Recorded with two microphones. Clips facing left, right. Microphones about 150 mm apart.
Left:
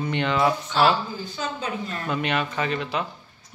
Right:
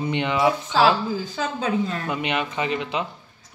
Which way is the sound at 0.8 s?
90° right.